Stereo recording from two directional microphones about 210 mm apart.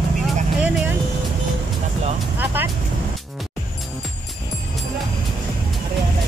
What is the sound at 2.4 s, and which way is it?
Vehicle, 10° right (ahead or behind).